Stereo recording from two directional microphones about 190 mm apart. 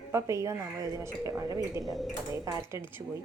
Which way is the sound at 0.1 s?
15° right (ahead or behind).